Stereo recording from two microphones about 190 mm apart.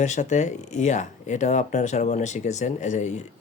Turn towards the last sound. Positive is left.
turn(degrees=40)  # may be behind; listen again after turning